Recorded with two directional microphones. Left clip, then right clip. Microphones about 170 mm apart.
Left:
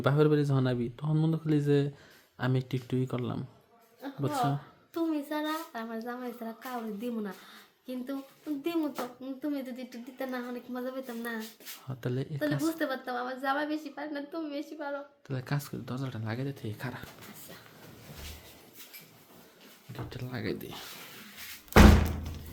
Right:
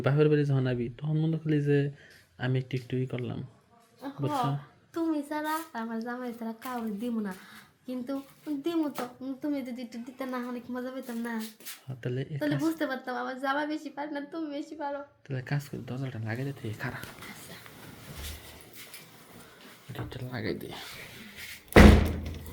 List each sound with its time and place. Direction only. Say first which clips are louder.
0.0 s speech: right 1 dB; 20° left (ahead or behind)
1.1 s speech: left 1 dB; 35° left (ahead or behind)
1.5 s speech: right 1 dB; 25° left (ahead or behind)
8.6 s a woman's voice: right 2 dB; 20° left (ahead or behind)
20.1 s speech: right 1 dB; 30° left (ahead or behind)